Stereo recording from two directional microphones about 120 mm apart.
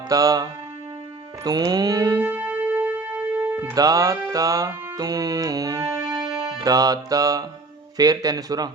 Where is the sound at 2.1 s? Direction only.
15° right (ahead or behind).